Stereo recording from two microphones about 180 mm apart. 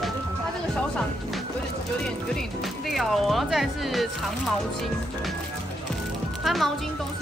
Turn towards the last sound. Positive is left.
turn(degrees=0)  # may be behind; listen again after turning